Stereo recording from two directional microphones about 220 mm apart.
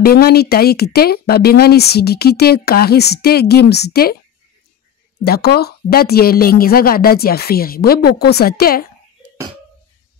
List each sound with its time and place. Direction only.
0.0 s speech: 45° left (ahead or behind)
5.2 s speech: 45° left (ahead or behind)